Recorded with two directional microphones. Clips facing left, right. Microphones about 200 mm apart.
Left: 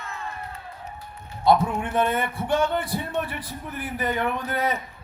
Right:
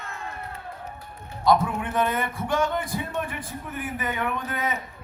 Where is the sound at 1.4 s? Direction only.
30° left (ahead or behind).